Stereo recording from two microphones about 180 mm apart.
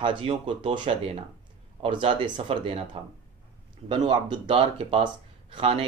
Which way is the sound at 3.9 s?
30° right (ahead or behind).